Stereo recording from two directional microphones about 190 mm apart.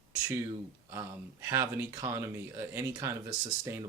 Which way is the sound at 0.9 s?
15° right (ahead or behind).